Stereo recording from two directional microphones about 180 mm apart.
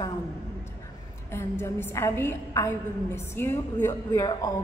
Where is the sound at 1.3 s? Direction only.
15° left (ahead or behind).